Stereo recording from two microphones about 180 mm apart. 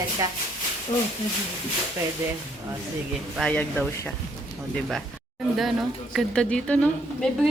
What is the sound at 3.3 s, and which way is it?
Speech, 5° left (ahead or behind).